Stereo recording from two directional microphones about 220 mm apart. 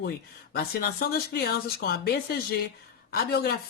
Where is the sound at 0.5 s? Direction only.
45° left (ahead or behind).